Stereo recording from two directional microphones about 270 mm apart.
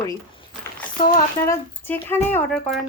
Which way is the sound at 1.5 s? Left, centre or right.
Centre.